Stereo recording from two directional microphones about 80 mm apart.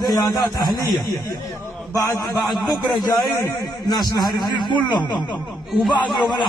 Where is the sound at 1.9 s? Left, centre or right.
Left.